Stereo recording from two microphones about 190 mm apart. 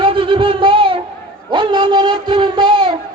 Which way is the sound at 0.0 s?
25° right (ahead or behind).